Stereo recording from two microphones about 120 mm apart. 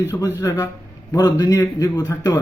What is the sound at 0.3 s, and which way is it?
A man's voice, 25° left (ahead or behind).